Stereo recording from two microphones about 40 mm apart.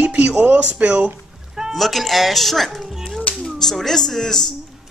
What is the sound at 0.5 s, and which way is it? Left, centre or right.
Speech, right.